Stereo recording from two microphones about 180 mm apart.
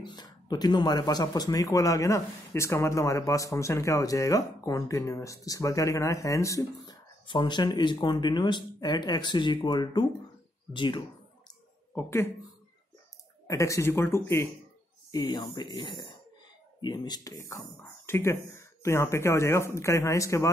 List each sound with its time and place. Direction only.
0.0 s speech: 25° left (ahead or behind)
11.9 s speech: 10° left (ahead or behind)
13.5 s speech: 15° left (ahead or behind)